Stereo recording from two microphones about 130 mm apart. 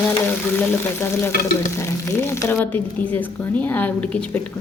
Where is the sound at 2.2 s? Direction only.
15° left (ahead or behind).